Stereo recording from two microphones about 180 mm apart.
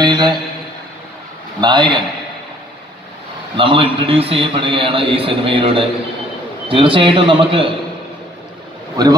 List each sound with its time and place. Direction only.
0.0 s a sound: 25° right (ahead or behind)
1.6 s a man's voice: 25° right (ahead or behind)
3.5 s a man's voice: 30° right (ahead or behind)
9.0 s a man's voice: 20° right (ahead or behind)